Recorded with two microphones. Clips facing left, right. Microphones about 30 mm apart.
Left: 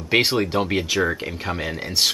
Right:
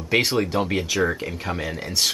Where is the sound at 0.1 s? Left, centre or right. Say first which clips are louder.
Left 2 dB; left.